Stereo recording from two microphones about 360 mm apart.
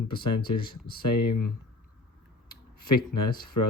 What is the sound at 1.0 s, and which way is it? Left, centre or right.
Speech, left.